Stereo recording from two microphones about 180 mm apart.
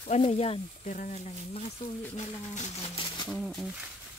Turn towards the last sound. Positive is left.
turn(degrees=0)  # may be behind; listen again after turning